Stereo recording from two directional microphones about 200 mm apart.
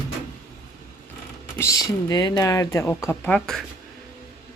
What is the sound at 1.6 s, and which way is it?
Speech, 15° left (ahead or behind).